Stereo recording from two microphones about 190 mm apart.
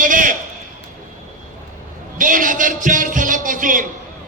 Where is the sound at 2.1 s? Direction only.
45° right (ahead or behind).